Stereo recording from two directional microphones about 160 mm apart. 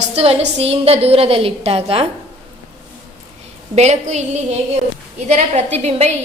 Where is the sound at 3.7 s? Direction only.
45° right (ahead or behind).